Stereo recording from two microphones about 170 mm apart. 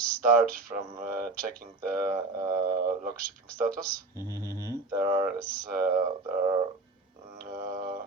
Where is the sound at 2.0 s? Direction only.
20° right (ahead or behind).